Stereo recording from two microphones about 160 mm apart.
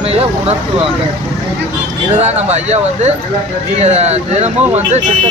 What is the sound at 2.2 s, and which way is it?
Speech, 45° right (ahead or behind).